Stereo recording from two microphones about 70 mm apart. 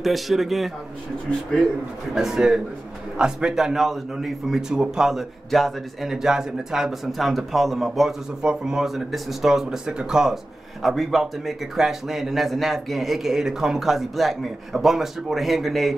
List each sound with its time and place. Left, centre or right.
0.0 s speech: centre
2.1 s a man's voice: centre